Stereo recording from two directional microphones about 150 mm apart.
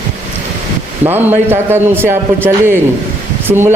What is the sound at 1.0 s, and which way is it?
A man's voice, 15° right (ahead or behind).